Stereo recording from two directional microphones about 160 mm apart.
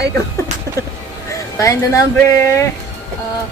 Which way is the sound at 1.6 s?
20° left (ahead or behind).